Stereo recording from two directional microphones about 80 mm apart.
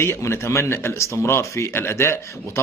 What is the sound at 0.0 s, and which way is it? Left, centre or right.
Speech, left.